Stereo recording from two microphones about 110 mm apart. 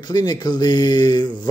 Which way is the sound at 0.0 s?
40° left (ahead or behind).